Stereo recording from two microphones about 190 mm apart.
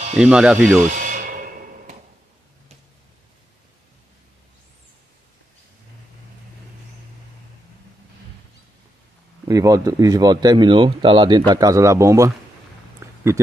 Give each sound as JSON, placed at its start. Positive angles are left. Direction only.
{"t": 0.2, "sound": "speech", "side_deg": -5}
{"t": 0.9, "sound": "music", "side_deg": -45}
{"t": 9.5, "sound": "speech", "side_deg": -15}
{"t": 13.0, "sound": "a sound", "side_deg": -15}